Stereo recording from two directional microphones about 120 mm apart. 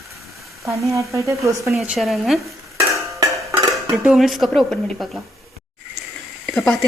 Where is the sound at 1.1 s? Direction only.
25° right (ahead or behind).